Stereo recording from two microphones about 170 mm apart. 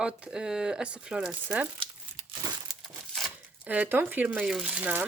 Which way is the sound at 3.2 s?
5° right (ahead or behind).